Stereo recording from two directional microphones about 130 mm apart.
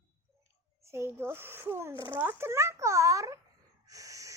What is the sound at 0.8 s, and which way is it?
A child's voice, 20° right (ahead or behind).